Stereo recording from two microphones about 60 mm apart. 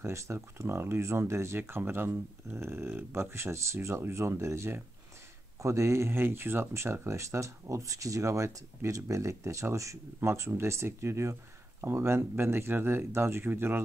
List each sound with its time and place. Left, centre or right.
0.0 s speech: right
1.6 s speech: right